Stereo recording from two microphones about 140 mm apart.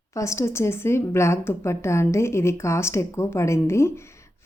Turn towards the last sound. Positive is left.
turn(degrees=20)  # may be behind; listen again after turning